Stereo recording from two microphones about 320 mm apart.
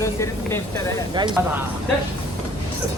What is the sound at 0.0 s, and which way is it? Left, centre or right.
Speech, centre.